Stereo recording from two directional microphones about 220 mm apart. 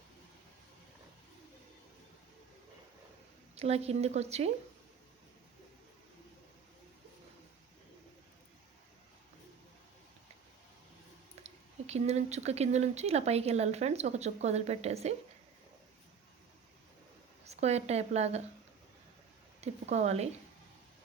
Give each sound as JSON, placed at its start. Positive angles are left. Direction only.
{"t": 3.5, "sound": "speech", "side_deg": -30}
{"t": 11.4, "sound": "speech", "side_deg": -30}
{"t": 17.4, "sound": "a woman's voice", "side_deg": -30}
{"t": 19.6, "sound": "speech", "side_deg": -30}